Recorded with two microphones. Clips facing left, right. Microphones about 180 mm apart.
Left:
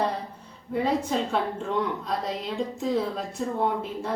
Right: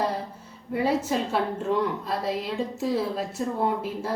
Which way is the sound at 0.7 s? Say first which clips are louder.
Right 1 dB; 5° right (ahead or behind).